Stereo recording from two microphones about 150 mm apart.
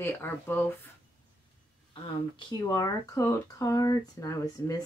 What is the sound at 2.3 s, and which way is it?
Speech, 25° left (ahead or behind).